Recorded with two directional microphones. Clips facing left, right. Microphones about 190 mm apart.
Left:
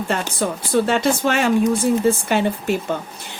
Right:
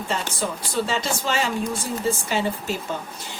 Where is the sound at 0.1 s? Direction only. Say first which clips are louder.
Left 3 dB; 55° left (ahead or behind).